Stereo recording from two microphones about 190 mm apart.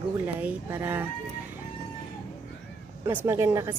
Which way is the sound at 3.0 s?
15° right (ahead or behind).